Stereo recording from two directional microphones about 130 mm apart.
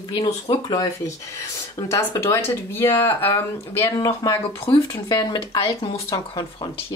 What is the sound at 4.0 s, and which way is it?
Speech, 25° left (ahead or behind).